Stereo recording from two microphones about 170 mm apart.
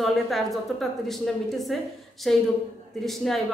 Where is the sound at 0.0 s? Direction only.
Centre (ahead or behind).